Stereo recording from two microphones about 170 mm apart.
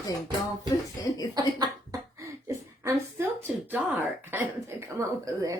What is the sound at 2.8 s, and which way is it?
Speech, 15° right (ahead or behind).